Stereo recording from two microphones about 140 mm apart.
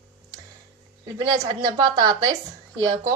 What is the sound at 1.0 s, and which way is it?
A woman's voice, 25° right (ahead or behind).